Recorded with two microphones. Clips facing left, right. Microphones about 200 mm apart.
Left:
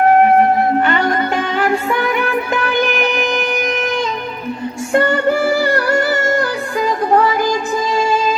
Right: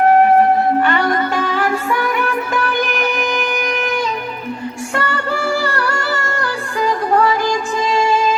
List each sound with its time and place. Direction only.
0.9 s music: 25° left (ahead or behind)
3.0 s music: 25° left (ahead or behind)
4.9 s music: 20° left (ahead or behind)